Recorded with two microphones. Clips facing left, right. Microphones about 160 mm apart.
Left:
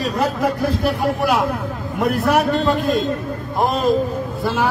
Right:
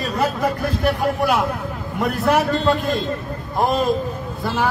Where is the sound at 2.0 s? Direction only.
Centre (ahead or behind).